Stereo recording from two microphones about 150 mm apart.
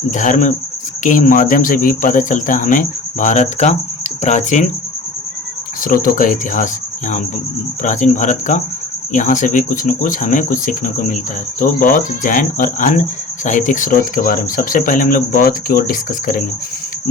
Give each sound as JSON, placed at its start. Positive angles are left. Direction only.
{"t": 0.1, "sound": "speech", "side_deg": 55}
{"t": 5.8, "sound": "speech", "side_deg": 65}
{"t": 7.8, "sound": "speech", "side_deg": 55}